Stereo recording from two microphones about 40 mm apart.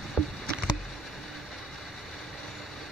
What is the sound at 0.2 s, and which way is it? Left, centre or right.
Rowboat, centre.